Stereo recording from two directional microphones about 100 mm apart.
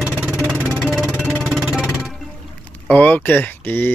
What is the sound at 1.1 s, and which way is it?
Music, 25° right (ahead or behind).